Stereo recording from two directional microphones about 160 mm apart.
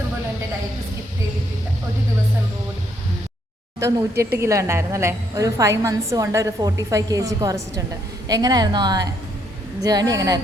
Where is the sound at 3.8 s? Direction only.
20° right (ahead or behind).